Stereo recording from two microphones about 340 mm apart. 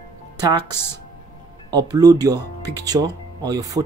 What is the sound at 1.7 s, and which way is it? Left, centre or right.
Speech, centre.